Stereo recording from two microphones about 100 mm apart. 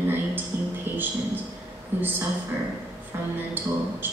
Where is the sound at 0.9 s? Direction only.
20° right (ahead or behind).